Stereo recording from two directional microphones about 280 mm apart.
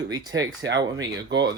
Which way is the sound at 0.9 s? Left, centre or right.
Right.